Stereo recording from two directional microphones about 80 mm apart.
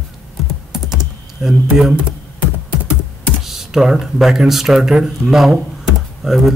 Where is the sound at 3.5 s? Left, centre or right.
Centre.